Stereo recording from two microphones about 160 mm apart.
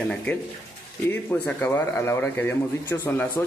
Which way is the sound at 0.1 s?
10° left (ahead or behind).